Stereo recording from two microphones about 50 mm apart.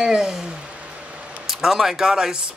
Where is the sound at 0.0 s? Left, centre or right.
Centre.